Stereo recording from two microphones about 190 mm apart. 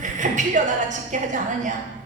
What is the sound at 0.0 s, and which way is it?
A woman's voice, 40° right (ahead or behind).